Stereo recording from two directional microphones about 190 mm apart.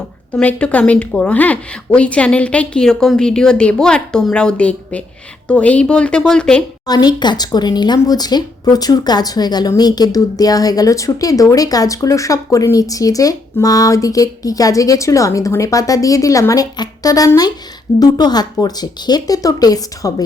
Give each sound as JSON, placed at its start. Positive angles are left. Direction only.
{"t": 0.3, "sound": "speech", "side_deg": 5}
{"t": 6.8, "sound": "speech", "side_deg": 20}